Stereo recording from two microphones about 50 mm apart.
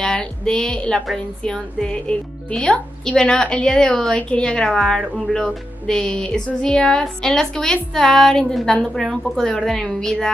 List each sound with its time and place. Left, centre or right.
0.0 s a woman's voice: centre
5.9 s speech: centre